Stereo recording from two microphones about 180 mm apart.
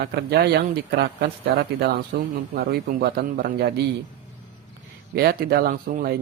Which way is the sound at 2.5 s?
60° right (ahead or behind).